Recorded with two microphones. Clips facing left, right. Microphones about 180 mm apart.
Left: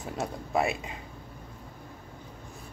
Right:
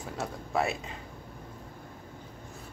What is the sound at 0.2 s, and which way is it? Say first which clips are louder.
Speech: left 2 dB; 15° left (ahead or behind).